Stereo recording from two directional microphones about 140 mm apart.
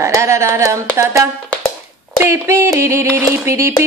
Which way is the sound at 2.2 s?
20° right (ahead or behind).